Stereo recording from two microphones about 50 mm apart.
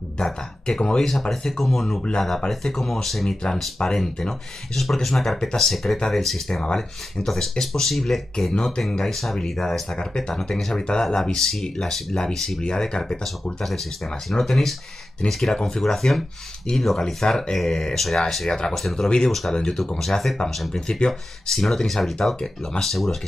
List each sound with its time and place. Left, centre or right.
0.2 s speech: centre
6.6 s speech: centre
14.3 s speech: centre
19.5 s speech: centre